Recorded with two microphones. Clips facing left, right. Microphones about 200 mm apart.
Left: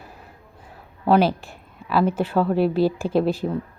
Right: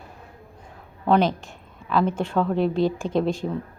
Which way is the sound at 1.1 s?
5° left (ahead or behind).